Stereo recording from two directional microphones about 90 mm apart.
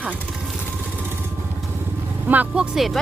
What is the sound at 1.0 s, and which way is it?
Vehicle, 25° right (ahead or behind).